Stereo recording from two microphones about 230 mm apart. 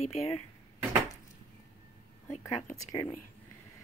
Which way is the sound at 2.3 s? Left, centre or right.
Left.